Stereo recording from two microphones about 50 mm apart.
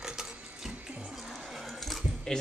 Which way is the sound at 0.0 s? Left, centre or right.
Centre.